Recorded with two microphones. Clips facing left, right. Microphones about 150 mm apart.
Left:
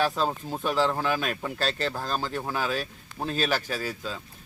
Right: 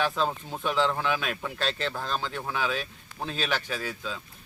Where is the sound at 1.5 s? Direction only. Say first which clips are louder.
Left 1 dB; 40° left (ahead or behind).